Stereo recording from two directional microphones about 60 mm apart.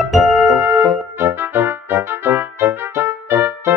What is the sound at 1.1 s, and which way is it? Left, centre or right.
Music, right.